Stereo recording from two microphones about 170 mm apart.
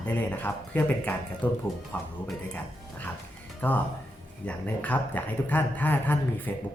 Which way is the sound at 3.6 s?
10° left (ahead or behind).